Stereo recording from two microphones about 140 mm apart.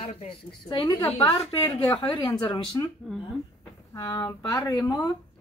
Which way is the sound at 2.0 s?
35° left (ahead or behind).